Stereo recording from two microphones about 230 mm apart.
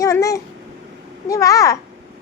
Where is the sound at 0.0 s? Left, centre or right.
Centre.